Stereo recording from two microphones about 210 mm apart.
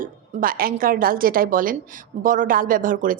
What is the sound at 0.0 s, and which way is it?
Speech, 40° right (ahead or behind).